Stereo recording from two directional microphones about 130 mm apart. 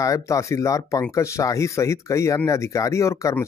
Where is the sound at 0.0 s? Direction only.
25° left (ahead or behind).